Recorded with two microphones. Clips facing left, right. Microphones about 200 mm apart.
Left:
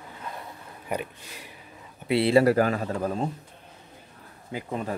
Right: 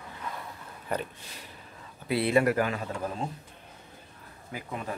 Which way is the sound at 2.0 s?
30° left (ahead or behind).